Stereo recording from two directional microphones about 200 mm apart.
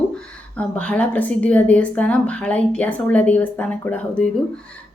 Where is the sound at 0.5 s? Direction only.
5° left (ahead or behind).